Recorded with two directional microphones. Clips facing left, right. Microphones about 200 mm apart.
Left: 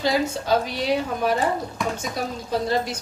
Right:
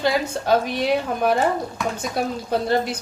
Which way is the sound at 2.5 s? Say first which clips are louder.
Right 2 dB; 60° right (ahead or behind).